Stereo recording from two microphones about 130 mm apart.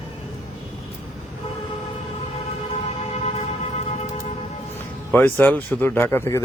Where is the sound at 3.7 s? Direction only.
60° left (ahead or behind).